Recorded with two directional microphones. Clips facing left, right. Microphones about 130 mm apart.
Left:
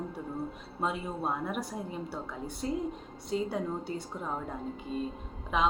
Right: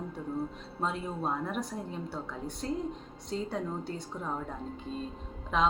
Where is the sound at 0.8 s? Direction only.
5° left (ahead or behind).